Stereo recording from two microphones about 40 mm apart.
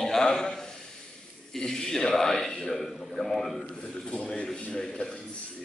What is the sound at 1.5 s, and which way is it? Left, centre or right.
A man's voice, centre.